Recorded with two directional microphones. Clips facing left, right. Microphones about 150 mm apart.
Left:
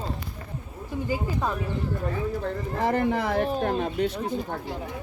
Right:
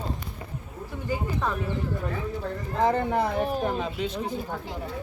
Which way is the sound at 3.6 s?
60° left (ahead or behind).